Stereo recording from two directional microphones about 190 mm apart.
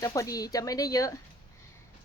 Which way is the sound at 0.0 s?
20° left (ahead or behind).